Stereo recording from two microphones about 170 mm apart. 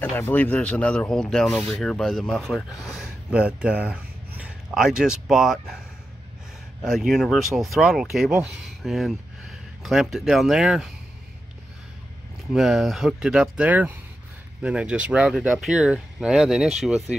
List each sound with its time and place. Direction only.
0.1 s speech: 10° left (ahead or behind)
6.8 s speech: centre (ahead or behind)
12.5 s speech: centre (ahead or behind)